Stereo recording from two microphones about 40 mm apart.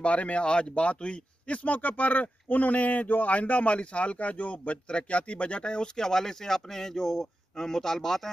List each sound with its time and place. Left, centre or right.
0.0 s speech: left
5.9 s speech: centre